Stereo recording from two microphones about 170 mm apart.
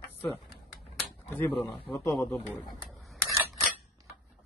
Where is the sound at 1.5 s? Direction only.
30° left (ahead or behind).